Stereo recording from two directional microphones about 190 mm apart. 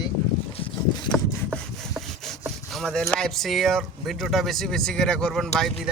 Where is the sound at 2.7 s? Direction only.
Centre (ahead or behind).